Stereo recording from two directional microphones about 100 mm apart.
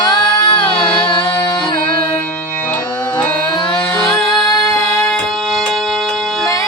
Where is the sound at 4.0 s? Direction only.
5° left (ahead or behind).